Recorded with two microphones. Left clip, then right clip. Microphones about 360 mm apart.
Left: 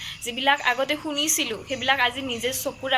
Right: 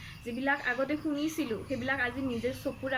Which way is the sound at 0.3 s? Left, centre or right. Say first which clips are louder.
Left 9 dB; left.